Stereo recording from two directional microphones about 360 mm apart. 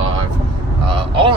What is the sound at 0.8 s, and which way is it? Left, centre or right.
Speech, centre.